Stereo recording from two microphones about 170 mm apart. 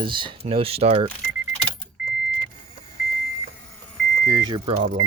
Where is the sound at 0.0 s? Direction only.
30° right (ahead or behind).